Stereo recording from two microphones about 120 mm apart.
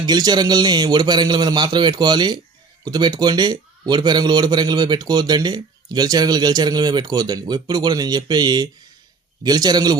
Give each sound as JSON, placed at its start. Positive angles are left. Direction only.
{"t": 0.0, "sound": "a man's voice", "side_deg": -35}